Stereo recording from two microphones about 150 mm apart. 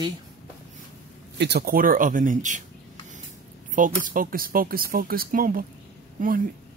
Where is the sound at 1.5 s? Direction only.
75° right (ahead or behind); by 2.6 s 60° right (ahead or behind).